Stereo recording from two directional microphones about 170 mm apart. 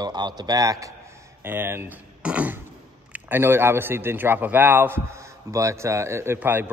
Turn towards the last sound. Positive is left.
turn(degrees=-10)  # may be behind; listen again after turning